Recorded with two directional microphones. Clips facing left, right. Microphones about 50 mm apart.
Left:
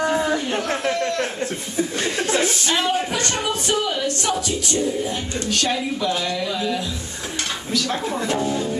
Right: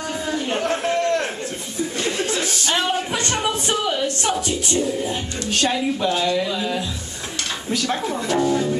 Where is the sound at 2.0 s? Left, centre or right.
Left.